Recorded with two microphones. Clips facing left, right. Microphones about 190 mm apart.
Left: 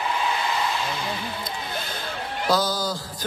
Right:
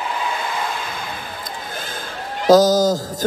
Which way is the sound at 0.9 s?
50° right (ahead or behind).